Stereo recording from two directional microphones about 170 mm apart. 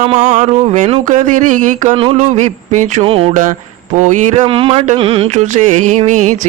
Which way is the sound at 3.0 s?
35° right (ahead or behind).